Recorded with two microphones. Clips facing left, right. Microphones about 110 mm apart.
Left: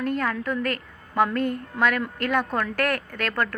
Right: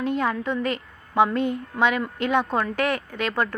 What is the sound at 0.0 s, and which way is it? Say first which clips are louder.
Speech: right 1 dB; centre (ahead or behind).